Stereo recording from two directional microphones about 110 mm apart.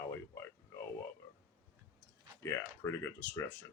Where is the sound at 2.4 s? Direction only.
25° left (ahead or behind).